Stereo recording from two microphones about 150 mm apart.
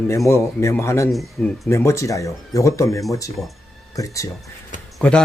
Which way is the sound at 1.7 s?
20° left (ahead or behind).